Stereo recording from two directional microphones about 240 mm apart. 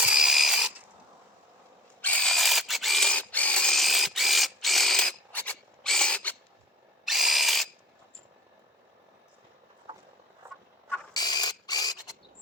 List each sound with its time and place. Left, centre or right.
0.0 s mechanisms: centre
2.0 s drill: centre
10.4 s a sound: centre
10.8 s mechanisms: centre